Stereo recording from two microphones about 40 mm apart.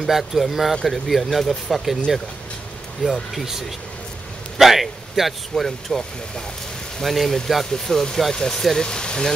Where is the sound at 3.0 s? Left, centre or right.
Centre.